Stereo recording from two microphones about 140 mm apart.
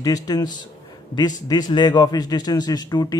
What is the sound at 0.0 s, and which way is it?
Speech, 25° left (ahead or behind).